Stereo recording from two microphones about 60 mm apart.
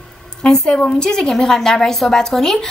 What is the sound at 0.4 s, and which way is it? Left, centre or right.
A woman's voice, centre.